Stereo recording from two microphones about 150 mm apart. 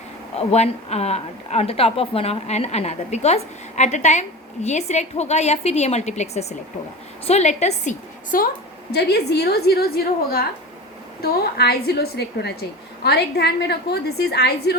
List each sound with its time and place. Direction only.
0.3 s a woman's voice: 45° left (ahead or behind)
8.9 s a woman's voice: 90° left